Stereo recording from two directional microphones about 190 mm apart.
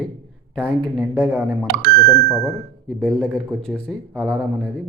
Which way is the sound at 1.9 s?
20° left (ahead or behind).